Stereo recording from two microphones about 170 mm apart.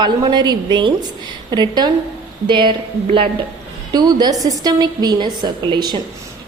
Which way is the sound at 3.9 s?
25° right (ahead or behind).